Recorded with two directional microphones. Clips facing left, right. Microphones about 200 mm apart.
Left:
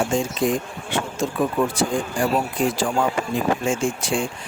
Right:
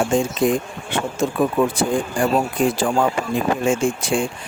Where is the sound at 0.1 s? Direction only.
55° right (ahead or behind).